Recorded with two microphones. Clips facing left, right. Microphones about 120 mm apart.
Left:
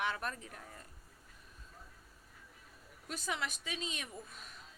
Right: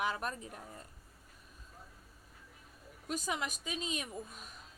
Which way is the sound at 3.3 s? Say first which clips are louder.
Left 2 dB; 15° right (ahead or behind).